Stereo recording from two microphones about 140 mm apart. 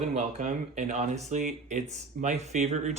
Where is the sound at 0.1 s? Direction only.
55° right (ahead or behind).